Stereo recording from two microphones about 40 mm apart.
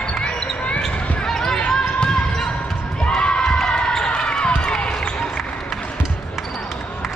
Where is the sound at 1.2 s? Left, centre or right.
Centre.